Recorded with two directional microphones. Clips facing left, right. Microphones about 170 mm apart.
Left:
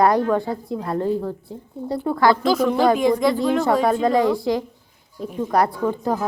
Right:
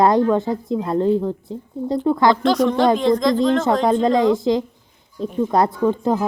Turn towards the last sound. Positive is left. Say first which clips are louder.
# right 4 dB
turn(degrees=-20)  # may be behind; listen again after turning